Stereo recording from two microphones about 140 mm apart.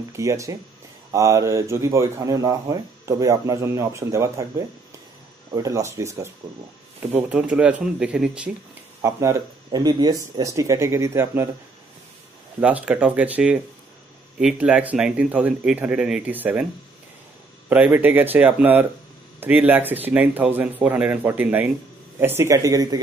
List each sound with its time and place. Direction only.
0.1 s speech: 20° right (ahead or behind)
9.0 s speech: 20° right (ahead or behind)
12.5 s speech: 10° right (ahead or behind)
17.6 s speech: 10° right (ahead or behind)